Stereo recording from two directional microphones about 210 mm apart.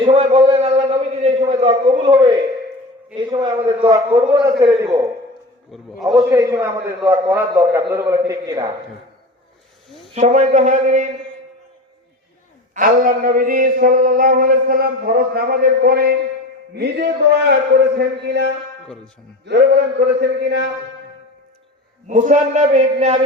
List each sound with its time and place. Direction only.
0.0 s a sound: 25° right (ahead or behind)
3.2 s a man's voice: 20° right (ahead or behind)
5.7 s a man's voice: centre (ahead or behind)
6.3 s a man's voice: 15° right (ahead or behind)
10.2 s a man's voice: 35° right (ahead or behind)
12.7 s a sound: 40° right (ahead or behind)
22.0 s a man's voice: 35° right (ahead or behind)